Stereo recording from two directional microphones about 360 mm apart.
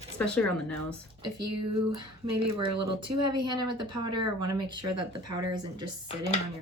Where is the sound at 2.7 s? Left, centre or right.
Right.